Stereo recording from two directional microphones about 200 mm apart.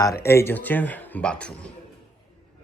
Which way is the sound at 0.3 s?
10° left (ahead or behind).